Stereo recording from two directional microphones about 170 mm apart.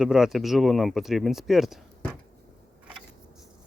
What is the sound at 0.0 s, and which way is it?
Speech, 5° right (ahead or behind).